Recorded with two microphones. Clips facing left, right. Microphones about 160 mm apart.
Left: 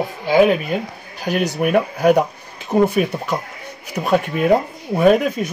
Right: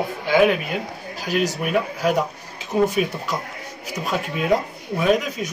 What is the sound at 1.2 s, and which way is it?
Speech, 55° left (ahead or behind).